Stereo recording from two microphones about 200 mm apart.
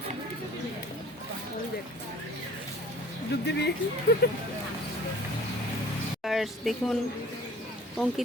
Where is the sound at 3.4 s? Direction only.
60° left (ahead or behind).